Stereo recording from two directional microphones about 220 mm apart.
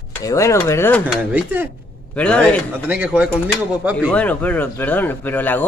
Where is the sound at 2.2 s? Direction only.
5° left (ahead or behind).